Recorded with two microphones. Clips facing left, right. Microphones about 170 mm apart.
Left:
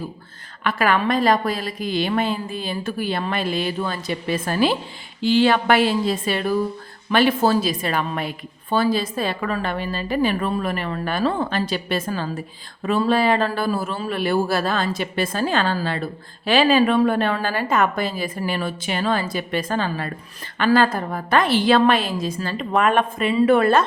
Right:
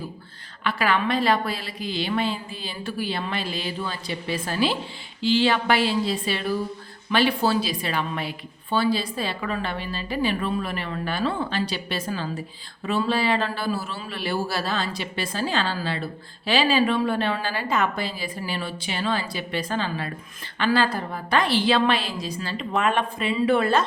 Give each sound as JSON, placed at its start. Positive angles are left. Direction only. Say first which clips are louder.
{"t": 0.6, "sound": "a woman's voice", "louder": "left 3 dB", "side_deg": 50}